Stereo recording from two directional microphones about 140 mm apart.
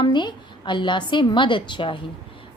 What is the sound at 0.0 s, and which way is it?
A woman's voice, 35° left (ahead or behind).